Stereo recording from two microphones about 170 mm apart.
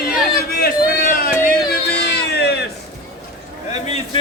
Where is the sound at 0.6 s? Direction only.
60° left (ahead or behind).